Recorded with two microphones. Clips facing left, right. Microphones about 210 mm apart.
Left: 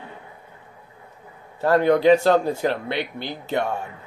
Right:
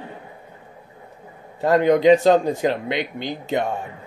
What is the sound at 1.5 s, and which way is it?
Speech, 15° right (ahead or behind).